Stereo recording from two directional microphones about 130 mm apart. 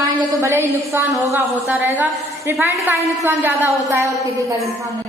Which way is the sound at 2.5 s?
20° right (ahead or behind).